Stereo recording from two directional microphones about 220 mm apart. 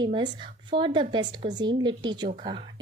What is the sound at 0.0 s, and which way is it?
A woman's voice, 20° right (ahead or behind).